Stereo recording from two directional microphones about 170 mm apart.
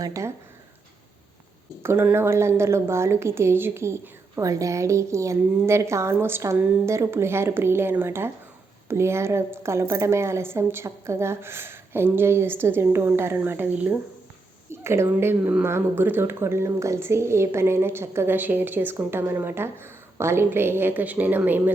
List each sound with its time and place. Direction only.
0.0 s speech: 20° right (ahead or behind)
1.8 s a woman's voice: 15° right (ahead or behind)